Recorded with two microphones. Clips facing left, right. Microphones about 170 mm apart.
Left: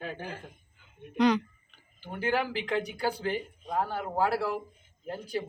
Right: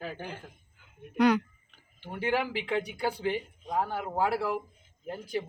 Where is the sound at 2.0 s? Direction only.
10° right (ahead or behind).